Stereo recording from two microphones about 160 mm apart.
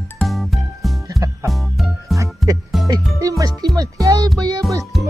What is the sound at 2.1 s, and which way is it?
Music, 20° right (ahead or behind).